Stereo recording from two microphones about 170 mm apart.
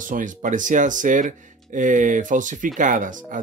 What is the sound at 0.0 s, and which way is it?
Speech, 50° right (ahead or behind).